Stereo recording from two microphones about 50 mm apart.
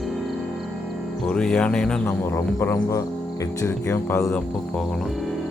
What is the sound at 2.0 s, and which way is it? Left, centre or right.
Speech, left.